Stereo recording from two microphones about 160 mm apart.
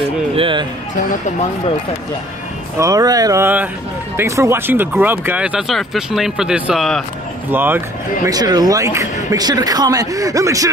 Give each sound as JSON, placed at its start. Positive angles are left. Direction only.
{"t": 0.4, "sound": "music", "side_deg": -30}
{"t": 2.8, "sound": "speech", "side_deg": -20}
{"t": 7.5, "sound": "speech", "side_deg": -10}
{"t": 8.3, "sound": "speech", "side_deg": -25}